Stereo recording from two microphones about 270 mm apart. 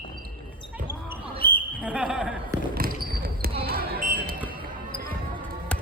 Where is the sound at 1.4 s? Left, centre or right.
Left.